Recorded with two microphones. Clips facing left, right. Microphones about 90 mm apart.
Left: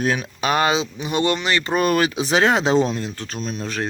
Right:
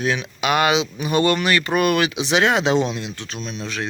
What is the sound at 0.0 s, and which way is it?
Speech, 45° left (ahead or behind).